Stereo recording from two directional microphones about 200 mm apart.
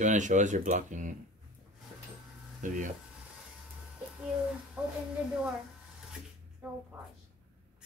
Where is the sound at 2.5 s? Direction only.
40° right (ahead or behind).